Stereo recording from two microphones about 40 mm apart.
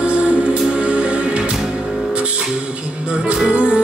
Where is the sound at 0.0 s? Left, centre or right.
Right.